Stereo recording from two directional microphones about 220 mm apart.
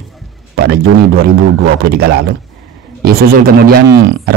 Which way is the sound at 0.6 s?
45° right (ahead or behind).